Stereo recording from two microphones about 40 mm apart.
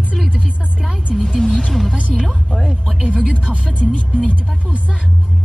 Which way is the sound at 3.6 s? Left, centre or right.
Left.